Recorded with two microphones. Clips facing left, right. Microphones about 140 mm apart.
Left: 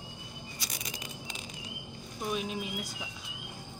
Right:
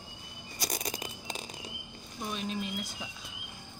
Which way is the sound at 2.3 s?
10° left (ahead or behind).